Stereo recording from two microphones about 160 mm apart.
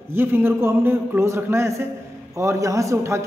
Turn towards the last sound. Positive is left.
turn(degrees=-20)  # may be behind; listen again after turning